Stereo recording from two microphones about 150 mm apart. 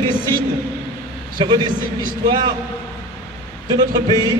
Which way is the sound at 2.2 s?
30° right (ahead or behind).